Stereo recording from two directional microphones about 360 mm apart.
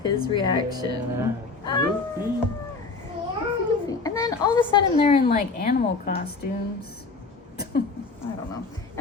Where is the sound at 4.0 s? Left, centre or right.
Centre.